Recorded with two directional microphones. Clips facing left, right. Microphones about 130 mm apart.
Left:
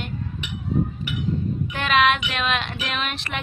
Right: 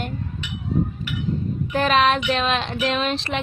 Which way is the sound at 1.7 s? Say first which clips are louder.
Right 2 dB; 35° right (ahead or behind).